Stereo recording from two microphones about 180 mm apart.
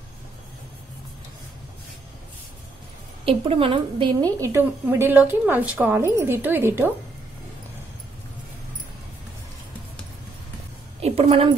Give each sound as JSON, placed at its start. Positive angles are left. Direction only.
{"t": 3.3, "sound": "a woman's voice", "side_deg": -30}
{"t": 4.2, "sound": "a woman's voice", "side_deg": -15}
{"t": 11.0, "sound": "a sound", "side_deg": -35}